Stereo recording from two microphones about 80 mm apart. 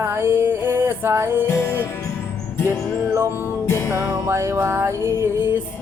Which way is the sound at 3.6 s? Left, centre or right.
Left.